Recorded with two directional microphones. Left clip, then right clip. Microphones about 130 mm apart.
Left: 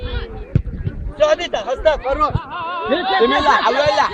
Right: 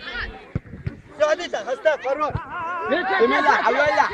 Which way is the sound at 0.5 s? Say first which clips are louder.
Left 12 dB; 50° left (ahead or behind).